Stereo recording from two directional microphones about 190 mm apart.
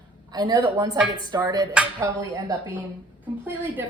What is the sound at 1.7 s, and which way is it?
Speech, 5° right (ahead or behind).